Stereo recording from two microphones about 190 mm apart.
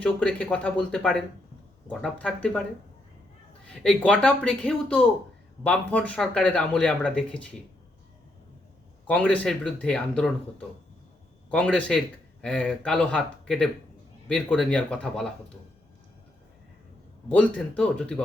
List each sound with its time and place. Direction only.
0.0 s speech: 5° left (ahead or behind)
3.7 s speech: 5° left (ahead or behind)
9.0 s speech: 5° left (ahead or behind)
11.5 s speech: 5° left (ahead or behind)
17.3 s speech: 5° left (ahead or behind)